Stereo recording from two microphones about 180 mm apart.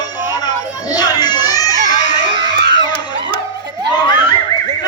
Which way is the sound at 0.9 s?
20° left (ahead or behind).